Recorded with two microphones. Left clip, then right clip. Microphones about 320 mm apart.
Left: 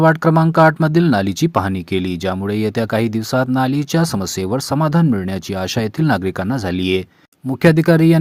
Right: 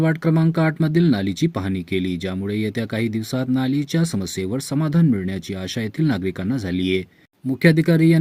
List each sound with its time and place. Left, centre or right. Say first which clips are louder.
0.0 s speech: left 8 dB; centre